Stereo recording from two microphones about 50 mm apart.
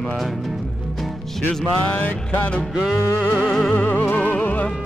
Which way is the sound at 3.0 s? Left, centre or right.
Left.